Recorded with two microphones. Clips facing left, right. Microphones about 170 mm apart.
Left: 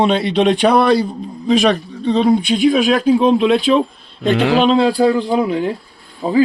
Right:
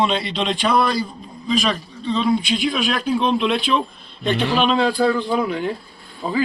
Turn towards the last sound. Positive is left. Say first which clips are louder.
# left 8 dB
turn(degrees=30)  # may be behind; listen again after turning